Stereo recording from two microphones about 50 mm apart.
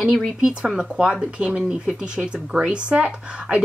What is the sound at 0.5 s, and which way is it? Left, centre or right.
Speech, centre.